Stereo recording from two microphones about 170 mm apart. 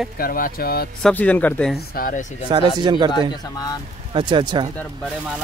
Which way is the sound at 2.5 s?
30° right (ahead or behind).